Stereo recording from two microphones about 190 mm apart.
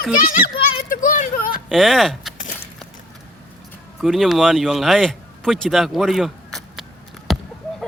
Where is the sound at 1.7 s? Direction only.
Centre (ahead or behind).